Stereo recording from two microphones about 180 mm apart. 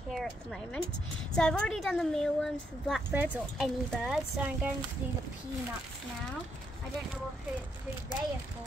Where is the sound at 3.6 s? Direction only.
Centre (ahead or behind).